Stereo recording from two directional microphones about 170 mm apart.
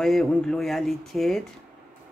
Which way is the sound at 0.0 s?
5° left (ahead or behind).